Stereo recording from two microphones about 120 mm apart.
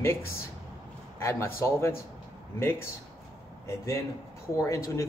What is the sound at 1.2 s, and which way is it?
Speech, 20° left (ahead or behind).